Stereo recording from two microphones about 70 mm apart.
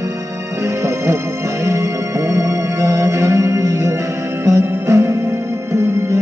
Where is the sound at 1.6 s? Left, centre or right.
Right.